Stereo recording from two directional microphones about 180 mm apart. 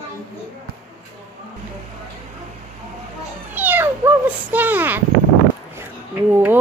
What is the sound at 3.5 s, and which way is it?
Speech, 10° right (ahead or behind).